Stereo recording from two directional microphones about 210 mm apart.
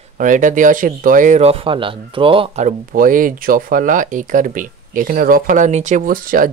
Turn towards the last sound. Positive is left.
turn(degrees=-40)  # may be behind; listen again after turning